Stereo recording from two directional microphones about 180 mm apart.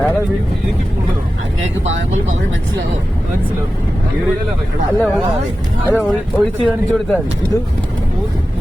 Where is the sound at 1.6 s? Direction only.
90° right.